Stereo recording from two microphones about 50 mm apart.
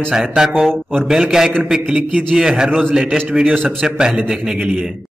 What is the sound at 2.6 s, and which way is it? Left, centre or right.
Speech, centre.